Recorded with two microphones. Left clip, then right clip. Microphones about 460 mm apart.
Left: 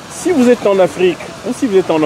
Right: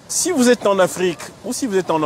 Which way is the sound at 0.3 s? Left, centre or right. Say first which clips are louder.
Left 5 dB; right.